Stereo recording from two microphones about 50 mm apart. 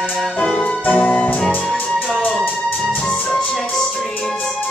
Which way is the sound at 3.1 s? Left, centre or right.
Centre.